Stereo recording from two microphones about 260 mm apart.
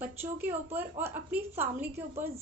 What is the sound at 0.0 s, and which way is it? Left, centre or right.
A woman's voice, centre.